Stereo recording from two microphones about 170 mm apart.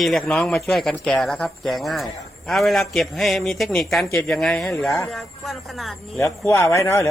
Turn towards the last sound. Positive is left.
turn(degrees=15)  # may be behind; listen again after turning